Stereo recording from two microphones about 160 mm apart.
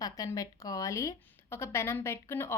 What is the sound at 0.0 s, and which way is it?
A woman's voice, 20° left (ahead or behind).